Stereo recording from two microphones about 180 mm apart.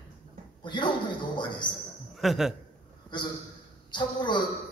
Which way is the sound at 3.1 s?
25° left (ahead or behind).